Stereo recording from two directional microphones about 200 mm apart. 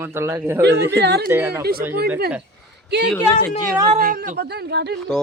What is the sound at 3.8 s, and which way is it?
A man's voice, 45° right (ahead or behind).